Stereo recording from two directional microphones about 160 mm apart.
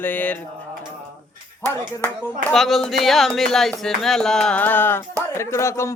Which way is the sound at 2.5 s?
Centre (ahead or behind).